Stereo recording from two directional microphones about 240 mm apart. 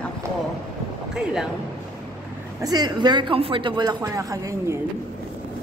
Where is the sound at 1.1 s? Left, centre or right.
Centre.